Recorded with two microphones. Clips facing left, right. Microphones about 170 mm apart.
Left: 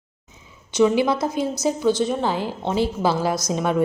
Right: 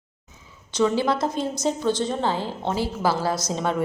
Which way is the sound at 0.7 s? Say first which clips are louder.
Left 3 dB; 10° left (ahead or behind).